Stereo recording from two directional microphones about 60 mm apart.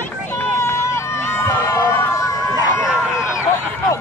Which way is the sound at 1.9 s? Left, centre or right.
Left.